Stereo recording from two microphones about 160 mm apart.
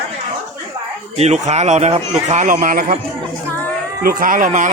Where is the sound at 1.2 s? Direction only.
45° right (ahead or behind).